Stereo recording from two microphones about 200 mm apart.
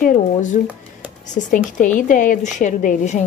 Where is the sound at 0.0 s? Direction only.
40° left (ahead or behind).